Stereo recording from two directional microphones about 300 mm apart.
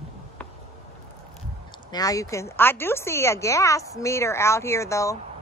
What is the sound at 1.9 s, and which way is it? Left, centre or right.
Speech, centre.